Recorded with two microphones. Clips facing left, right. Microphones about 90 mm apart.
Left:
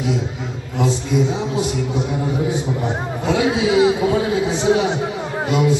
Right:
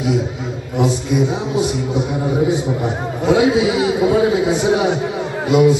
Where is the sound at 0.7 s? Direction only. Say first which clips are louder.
Right 2 dB; 15° right (ahead or behind).